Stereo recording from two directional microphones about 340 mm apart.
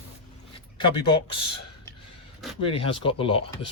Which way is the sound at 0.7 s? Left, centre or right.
Centre.